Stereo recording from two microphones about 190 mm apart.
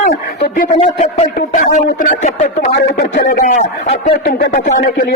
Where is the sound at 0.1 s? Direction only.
45° left (ahead or behind).